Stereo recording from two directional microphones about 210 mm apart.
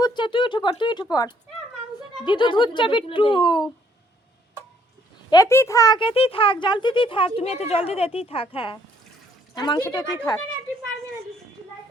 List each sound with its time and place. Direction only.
0.0 s speech: 20° left (ahead or behind)
5.3 s speech: 15° left (ahead or behind)